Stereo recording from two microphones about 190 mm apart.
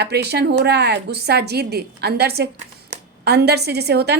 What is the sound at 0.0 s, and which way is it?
A woman's voice, 60° right (ahead or behind).